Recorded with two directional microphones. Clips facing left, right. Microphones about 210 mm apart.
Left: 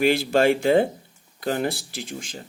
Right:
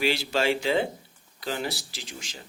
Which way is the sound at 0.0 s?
50° left (ahead or behind).